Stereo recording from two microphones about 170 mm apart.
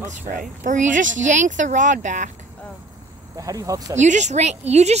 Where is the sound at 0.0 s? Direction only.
45° right (ahead or behind).